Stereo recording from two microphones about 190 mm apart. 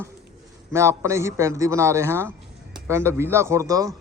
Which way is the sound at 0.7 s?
15° right (ahead or behind).